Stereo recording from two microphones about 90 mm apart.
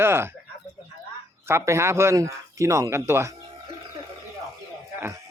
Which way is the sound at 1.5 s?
30° right (ahead or behind).